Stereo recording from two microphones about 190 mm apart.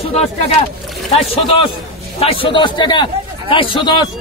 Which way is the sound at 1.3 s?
30° left (ahead or behind).